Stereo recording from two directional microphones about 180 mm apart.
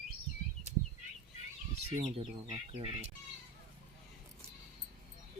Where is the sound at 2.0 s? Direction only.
30° right (ahead or behind).